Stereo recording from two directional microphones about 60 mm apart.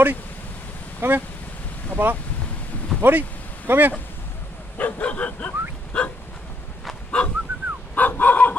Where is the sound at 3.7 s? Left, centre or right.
Right.